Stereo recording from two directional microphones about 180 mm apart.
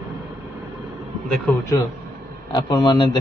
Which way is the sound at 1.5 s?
5° left (ahead or behind).